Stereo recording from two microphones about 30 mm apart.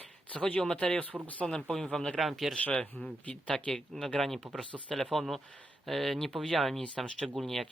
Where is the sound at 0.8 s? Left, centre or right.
Left.